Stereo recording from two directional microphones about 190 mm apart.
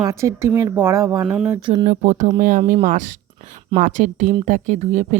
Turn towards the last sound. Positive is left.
turn(degrees=-35)  # may be behind; listen again after turning